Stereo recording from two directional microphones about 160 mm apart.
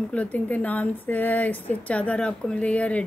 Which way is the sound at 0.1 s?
10° left (ahead or behind).